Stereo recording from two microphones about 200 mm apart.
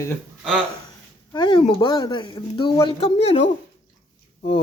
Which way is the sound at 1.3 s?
20° left (ahead or behind).